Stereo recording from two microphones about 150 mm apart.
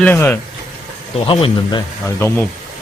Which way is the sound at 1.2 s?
35° left (ahead or behind).